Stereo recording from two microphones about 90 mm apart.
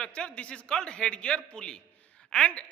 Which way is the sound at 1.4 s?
10° left (ahead or behind).